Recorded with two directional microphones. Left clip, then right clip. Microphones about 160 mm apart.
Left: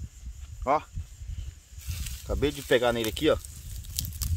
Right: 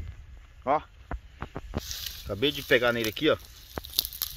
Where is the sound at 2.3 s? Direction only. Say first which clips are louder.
Right 1 dB; 15° left (ahead or behind).